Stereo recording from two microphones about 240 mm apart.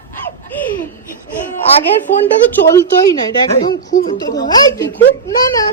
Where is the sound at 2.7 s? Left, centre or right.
Centre.